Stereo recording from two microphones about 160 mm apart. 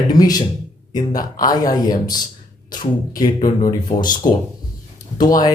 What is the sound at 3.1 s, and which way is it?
Speech, 25° left (ahead or behind).